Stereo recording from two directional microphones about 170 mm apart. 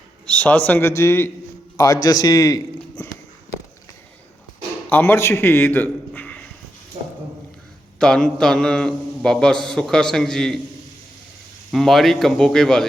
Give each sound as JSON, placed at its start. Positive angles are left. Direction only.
{"t": 0.3, "sound": "a man's voice", "side_deg": 5}
{"t": 4.9, "sound": "a man's voice", "side_deg": 10}
{"t": 7.9, "sound": "mantra", "side_deg": 5}
{"t": 11.7, "sound": "mantra", "side_deg": 0}